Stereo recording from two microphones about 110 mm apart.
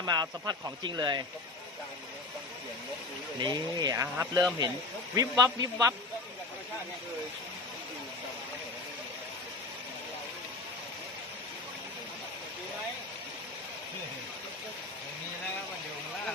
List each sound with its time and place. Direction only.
0.0 s speech: 40° right (ahead or behind)
3.3 s speech: 40° right (ahead or behind)